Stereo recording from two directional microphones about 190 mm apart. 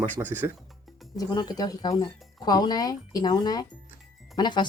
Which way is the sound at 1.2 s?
20° left (ahead or behind).